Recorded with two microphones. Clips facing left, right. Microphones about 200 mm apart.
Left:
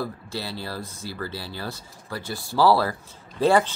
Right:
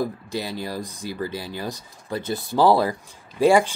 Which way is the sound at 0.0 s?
15° right (ahead or behind).